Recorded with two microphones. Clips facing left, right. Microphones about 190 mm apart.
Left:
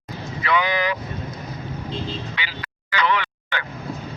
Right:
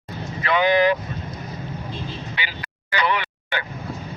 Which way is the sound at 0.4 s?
50° right (ahead or behind).